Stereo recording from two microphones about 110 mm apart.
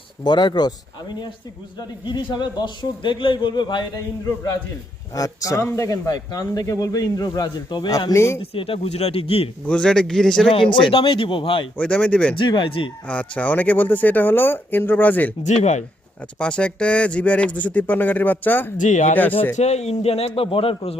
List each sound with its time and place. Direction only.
0.3 s a man's voice: 45° left (ahead or behind)
2.0 s a man's voice: 45° left (ahead or behind)
5.1 s speech: 35° left (ahead or behind)
8.4 s speech: 60° left (ahead or behind)
9.6 s speech: 10° left (ahead or behind)
10.5 s a man's voice: 50° left (ahead or behind)
11.8 s speech: 10° left (ahead or behind)
12.4 s a man's voice: 45° left (ahead or behind)
13.1 s speech: 10° left (ahead or behind)
15.4 s speech: 90° left
16.4 s speech: 10° left (ahead or behind)
19.5 s a man's voice: 85° left; by 21.0 s 60° left (ahead or behind)